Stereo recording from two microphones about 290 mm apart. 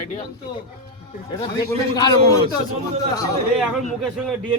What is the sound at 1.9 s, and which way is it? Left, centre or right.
Speech, centre.